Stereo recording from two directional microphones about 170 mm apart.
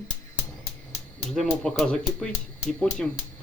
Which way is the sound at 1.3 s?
Centre (ahead or behind).